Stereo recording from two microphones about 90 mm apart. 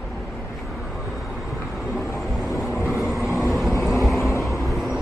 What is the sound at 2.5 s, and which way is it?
Vehicle, 30° left (ahead or behind).